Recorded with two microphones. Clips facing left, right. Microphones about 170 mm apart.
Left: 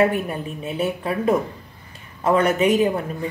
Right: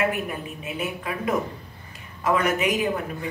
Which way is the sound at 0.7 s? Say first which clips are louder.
Left 6 dB; 30° left (ahead or behind).